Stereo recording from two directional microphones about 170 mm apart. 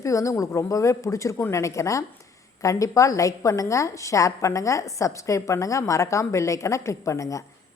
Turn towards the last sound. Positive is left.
turn(degrees=20)  # may be behind; listen again after turning